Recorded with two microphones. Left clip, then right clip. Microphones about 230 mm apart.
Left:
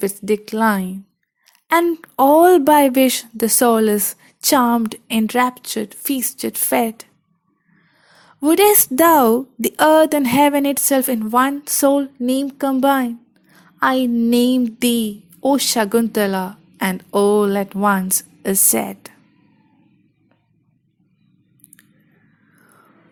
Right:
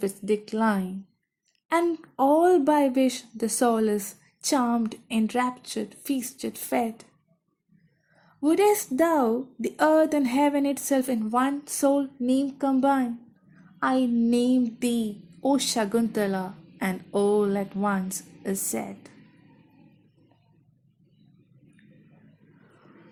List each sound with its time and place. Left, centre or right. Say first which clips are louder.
0.0 s a woman's voice: left 7 dB; left
8.4 s a woman's voice: left 8 dB; left